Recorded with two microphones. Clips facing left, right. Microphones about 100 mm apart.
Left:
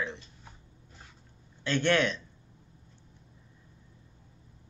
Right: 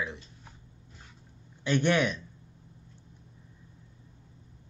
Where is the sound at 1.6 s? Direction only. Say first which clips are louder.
Right 1 dB; 15° right (ahead or behind).